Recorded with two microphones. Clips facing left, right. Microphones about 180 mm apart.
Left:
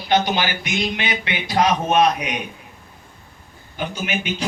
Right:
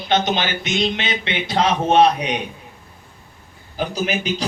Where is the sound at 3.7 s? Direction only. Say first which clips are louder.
Right 3 dB; 35° right (ahead or behind).